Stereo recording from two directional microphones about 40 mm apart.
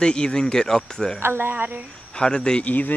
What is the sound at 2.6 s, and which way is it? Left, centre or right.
Speech, left.